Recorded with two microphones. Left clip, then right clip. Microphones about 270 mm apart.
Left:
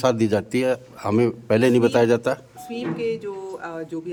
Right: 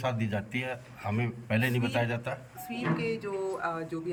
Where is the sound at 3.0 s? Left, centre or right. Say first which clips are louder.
Left 6 dB; centre.